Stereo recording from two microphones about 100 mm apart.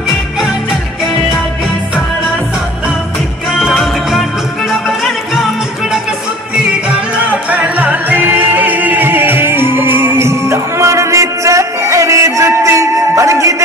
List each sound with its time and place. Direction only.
3.5 s music: centre (ahead or behind)
7.4 s music: 15° right (ahead or behind); by 13.6 s 30° right (ahead or behind)